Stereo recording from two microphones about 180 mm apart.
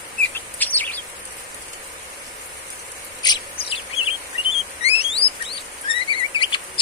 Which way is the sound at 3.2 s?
20° left (ahead or behind).